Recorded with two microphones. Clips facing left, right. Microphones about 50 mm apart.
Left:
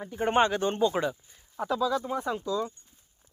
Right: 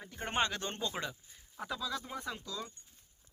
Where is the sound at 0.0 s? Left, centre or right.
Centre.